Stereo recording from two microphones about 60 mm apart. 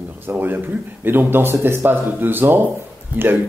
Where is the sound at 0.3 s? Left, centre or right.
Right.